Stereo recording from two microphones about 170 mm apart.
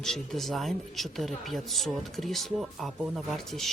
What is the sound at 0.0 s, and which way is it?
Speech, centre (ahead or behind).